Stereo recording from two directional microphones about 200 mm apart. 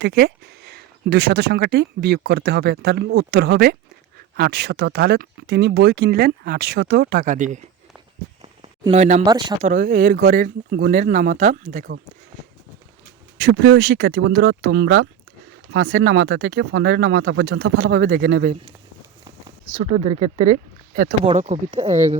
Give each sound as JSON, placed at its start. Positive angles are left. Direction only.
{"t": 0.0, "sound": "speech", "side_deg": -55}
{"t": 8.9, "sound": "speech", "side_deg": -35}
{"t": 9.2, "sound": "speech", "side_deg": -20}
{"t": 9.6, "sound": "speech", "side_deg": -40}
{"t": 13.5, "sound": "speech", "side_deg": -60}
{"t": 16.1, "sound": "speech", "side_deg": -60}
{"t": 19.7, "sound": "speech", "side_deg": -35}